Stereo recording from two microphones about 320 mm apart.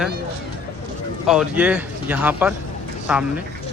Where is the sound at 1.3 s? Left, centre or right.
Centre.